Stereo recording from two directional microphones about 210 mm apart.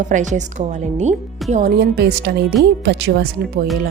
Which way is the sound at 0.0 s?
35° right (ahead or behind).